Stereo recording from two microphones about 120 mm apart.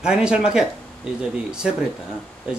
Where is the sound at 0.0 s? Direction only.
5° right (ahead or behind).